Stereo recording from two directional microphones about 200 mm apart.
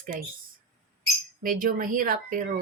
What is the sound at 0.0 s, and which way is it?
Speech, 45° right (ahead or behind).